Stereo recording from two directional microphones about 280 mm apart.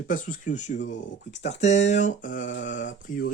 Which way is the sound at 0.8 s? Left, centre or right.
Left.